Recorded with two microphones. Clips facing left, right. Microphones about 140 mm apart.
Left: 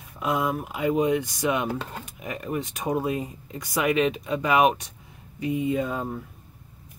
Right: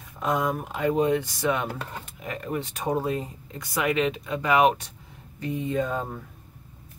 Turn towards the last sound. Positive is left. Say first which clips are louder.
# left 1 dB
turn(degrees=10)  # may be behind; listen again after turning